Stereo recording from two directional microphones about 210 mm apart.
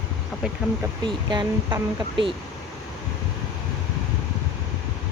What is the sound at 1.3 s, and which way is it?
Speech, 20° right (ahead or behind).